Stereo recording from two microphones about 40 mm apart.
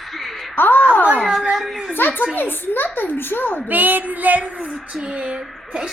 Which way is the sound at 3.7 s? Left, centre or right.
Right.